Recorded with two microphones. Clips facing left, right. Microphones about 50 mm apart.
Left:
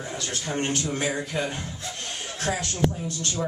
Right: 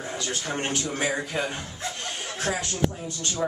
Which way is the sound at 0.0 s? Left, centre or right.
Centre.